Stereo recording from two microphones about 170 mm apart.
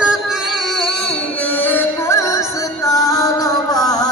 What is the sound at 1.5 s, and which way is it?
Music, 10° left (ahead or behind).